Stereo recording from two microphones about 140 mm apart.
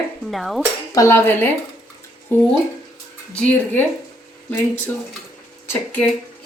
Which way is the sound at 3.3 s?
10° left (ahead or behind).